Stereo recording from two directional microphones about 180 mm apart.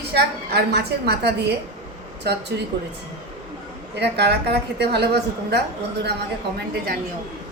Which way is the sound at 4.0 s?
70° right (ahead or behind).